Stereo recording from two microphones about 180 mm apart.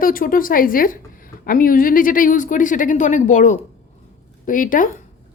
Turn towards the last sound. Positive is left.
turn(degrees=50)  # may be behind; listen again after turning